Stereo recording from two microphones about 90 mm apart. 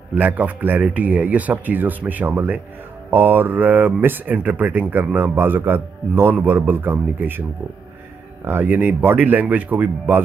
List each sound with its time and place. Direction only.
0.1 s speech: 20° right (ahead or behind)
8.5 s speech: 20° right (ahead or behind)